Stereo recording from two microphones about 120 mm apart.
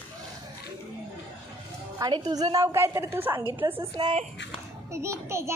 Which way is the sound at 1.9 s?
35° right (ahead or behind).